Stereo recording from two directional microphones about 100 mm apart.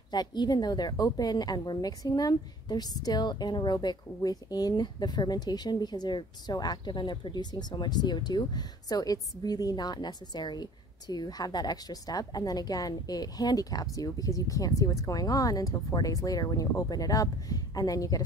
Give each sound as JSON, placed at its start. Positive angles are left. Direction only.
{"t": 0.1, "sound": "a woman's voice", "side_deg": 45}